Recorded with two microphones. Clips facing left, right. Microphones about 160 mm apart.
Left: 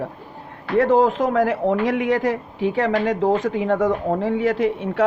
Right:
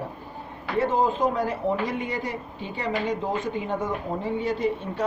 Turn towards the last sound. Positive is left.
turn(degrees=90)